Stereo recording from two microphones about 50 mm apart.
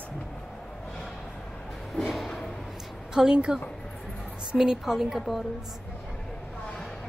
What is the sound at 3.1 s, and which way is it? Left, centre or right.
A woman's voice, centre.